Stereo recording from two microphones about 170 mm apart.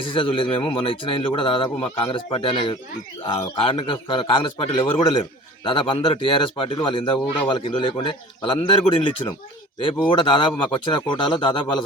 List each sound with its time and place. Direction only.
0.0 s a man's voice: 30° left (ahead or behind)